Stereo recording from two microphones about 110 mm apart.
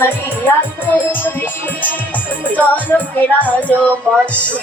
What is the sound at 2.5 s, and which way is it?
Music, 15° left (ahead or behind).